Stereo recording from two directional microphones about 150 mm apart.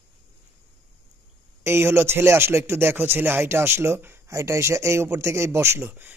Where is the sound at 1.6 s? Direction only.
15° right (ahead or behind).